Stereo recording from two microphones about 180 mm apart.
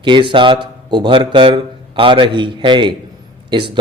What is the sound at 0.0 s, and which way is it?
Speech, 25° right (ahead or behind).